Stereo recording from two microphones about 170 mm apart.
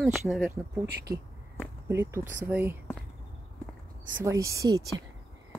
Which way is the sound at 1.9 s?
15° right (ahead or behind).